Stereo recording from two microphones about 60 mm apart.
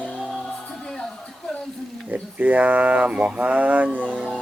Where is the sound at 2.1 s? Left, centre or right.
Right.